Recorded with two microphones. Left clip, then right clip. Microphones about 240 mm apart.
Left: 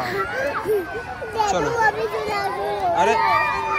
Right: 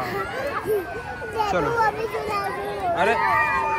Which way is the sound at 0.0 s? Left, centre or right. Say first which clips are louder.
Left 3 dB; left.